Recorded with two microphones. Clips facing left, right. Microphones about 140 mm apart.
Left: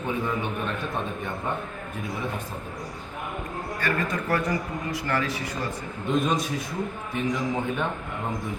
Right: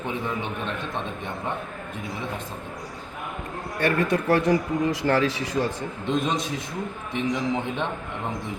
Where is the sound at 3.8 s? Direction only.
65° right (ahead or behind).